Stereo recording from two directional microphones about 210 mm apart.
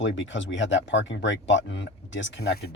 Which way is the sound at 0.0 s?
60° left (ahead or behind).